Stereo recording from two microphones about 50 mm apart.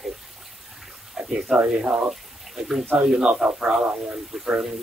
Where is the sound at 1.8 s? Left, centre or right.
Centre.